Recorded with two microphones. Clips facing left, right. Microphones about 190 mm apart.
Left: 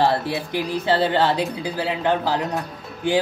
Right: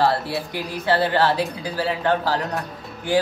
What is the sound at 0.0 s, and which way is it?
Speech, 20° left (ahead or behind).